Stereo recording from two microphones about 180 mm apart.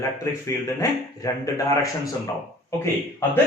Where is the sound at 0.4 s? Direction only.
15° left (ahead or behind).